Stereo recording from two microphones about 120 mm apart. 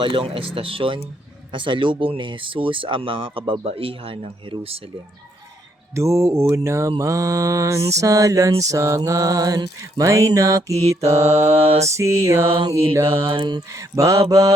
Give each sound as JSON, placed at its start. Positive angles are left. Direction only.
{"t": 0.0, "sound": "speech", "side_deg": -45}
{"t": 5.9, "sound": "mantra", "side_deg": -25}
{"t": 11.5, "sound": "mantra", "side_deg": -55}
{"t": 11.9, "sound": "mantra", "side_deg": -25}
{"t": 12.5, "sound": "a sound", "side_deg": -40}
{"t": 12.7, "sound": "mantra", "side_deg": -20}
{"t": 13.2, "sound": "a sound", "side_deg": -40}
{"t": 13.7, "sound": "mantra", "side_deg": -25}